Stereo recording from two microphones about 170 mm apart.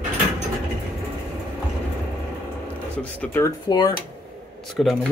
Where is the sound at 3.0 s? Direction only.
10° left (ahead or behind).